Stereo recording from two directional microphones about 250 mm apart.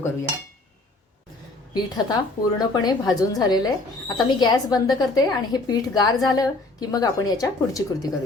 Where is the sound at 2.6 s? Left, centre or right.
Centre.